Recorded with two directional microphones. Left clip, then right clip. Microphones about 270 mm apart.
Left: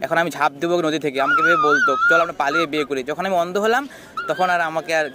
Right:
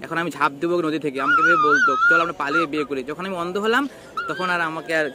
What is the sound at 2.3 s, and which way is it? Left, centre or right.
A man's voice, left.